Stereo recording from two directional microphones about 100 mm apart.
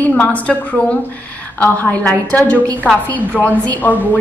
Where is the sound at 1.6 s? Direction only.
15° left (ahead or behind).